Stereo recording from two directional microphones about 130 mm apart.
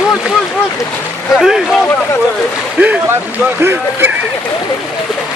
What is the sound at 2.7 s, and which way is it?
Speech, 10° right (ahead or behind).